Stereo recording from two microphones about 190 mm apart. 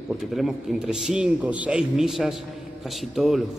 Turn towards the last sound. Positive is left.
turn(degrees=0)  # may be behind; listen again after turning